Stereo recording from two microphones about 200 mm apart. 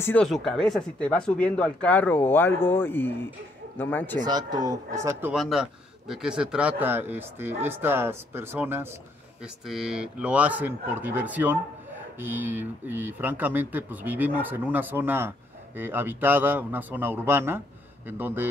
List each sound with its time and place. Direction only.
0.0 s speech: 5° left (ahead or behind)
4.3 s speech: 20° right (ahead or behind)
5.3 s a man's voice: centre (ahead or behind)